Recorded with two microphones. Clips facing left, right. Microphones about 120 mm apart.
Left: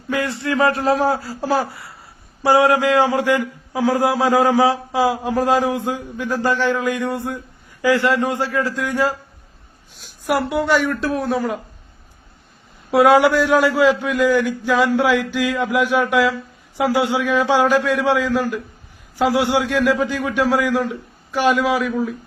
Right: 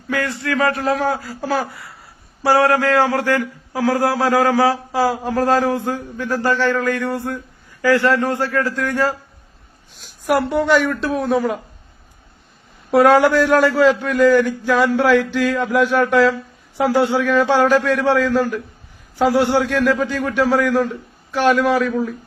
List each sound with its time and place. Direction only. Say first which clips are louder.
0.1 s a man's voice: even; 25° left (ahead or behind)
10.3 s a woman's voice: right 2 dB; 5° left (ahead or behind)
12.9 s a man's voice: right 1 dB; 10° left (ahead or behind)